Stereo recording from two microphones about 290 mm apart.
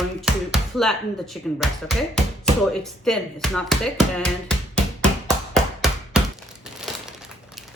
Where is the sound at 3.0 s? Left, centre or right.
Centre.